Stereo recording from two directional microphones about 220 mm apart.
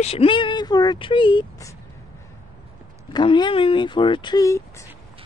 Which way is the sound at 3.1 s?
20° left (ahead or behind).